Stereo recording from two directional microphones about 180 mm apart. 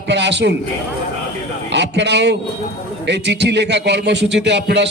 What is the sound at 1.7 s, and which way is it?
A man's voice, 75° right (ahead or behind).